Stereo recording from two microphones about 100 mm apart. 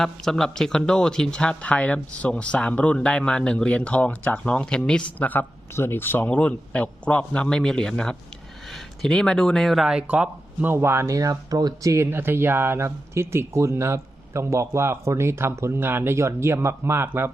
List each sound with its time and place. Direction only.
0.0 s speech: 5° left (ahead or behind)
5.2 s speech: 20° left (ahead or behind); by 10.0 s centre (ahead or behind)
10.0 s speech: 15° right (ahead or behind)